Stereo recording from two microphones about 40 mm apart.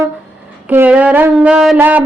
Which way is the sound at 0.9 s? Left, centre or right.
Right.